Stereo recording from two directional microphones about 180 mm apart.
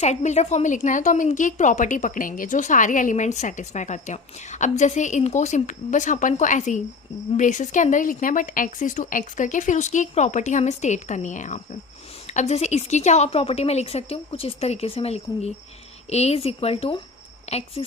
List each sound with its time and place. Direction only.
0.0 s a woman's voice: 40° left (ahead or behind)